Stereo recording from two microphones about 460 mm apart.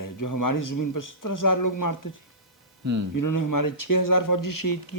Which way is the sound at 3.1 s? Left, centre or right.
Left.